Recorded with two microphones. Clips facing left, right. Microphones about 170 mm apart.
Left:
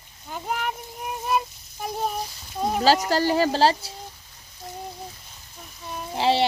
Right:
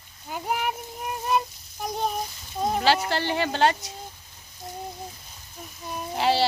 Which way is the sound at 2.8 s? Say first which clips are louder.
Left 5 dB; 40° left (ahead or behind).